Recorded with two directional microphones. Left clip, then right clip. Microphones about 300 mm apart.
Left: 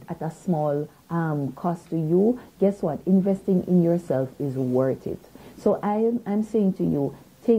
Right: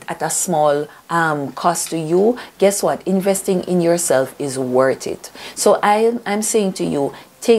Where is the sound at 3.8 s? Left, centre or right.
Centre.